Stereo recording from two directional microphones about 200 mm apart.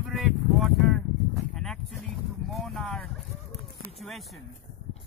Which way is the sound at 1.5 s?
Centre (ahead or behind).